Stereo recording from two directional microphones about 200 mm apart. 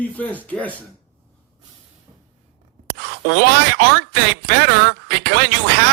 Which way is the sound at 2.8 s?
55° right (ahead or behind).